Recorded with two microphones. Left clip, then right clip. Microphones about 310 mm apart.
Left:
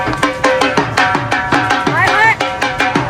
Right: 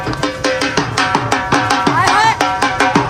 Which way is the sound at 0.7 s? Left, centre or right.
Centre.